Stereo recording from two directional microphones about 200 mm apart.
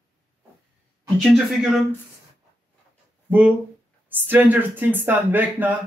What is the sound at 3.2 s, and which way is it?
Speech, 5° right (ahead or behind).